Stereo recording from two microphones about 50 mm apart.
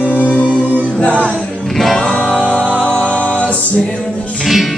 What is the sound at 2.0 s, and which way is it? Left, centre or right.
Music, centre.